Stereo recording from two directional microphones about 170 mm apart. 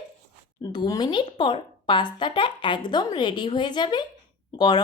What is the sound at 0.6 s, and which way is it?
A woman's voice, 25° left (ahead or behind).